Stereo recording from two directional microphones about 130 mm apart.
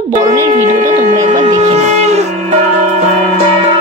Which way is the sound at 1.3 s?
65° right (ahead or behind).